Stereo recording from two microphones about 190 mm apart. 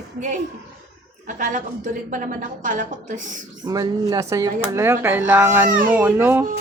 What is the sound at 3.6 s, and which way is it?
Speech, 20° right (ahead or behind).